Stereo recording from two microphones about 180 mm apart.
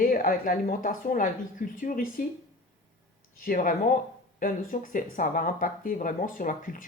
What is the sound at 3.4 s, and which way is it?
Speech, 50° left (ahead or behind).